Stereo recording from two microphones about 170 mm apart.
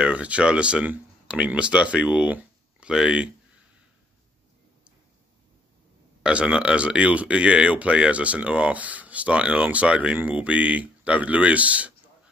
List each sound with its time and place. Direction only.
0.0 s speech: 5° right (ahead or behind)
6.2 s speech: 5° right (ahead or behind)